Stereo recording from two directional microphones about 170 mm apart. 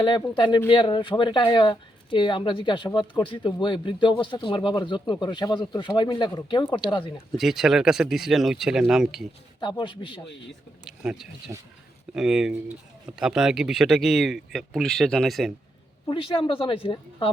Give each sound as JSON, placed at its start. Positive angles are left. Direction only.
{"t": 0.0, "sound": "speech", "side_deg": 25}
{"t": 7.3, "sound": "speech", "side_deg": 0}
{"t": 9.6, "sound": "speech", "side_deg": 25}
{"t": 10.8, "sound": "speech", "side_deg": -5}
{"t": 16.0, "sound": "speech", "side_deg": 30}